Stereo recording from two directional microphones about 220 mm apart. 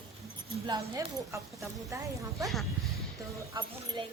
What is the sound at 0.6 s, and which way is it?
Speech, 20° right (ahead or behind).